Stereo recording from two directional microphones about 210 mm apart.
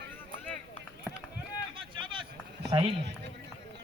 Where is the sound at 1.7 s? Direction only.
25° right (ahead or behind).